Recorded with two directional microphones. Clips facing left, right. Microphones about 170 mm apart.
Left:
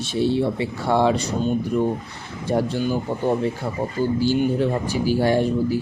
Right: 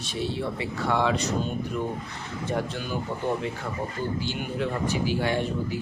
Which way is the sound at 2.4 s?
35° left (ahead or behind).